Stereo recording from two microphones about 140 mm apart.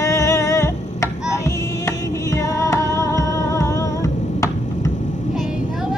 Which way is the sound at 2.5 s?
20° left (ahead or behind).